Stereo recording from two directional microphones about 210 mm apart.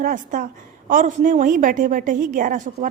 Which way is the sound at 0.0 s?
40° right (ahead or behind).